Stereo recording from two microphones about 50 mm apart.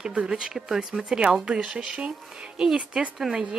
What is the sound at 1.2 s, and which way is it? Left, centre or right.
Speech, centre.